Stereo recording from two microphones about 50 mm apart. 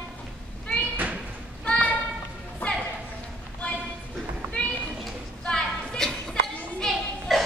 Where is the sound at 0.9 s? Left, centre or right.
Right.